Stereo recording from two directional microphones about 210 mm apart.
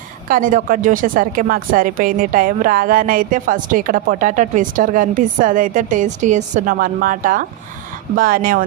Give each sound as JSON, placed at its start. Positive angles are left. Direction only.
{"t": 0.3, "sound": "speech", "side_deg": -40}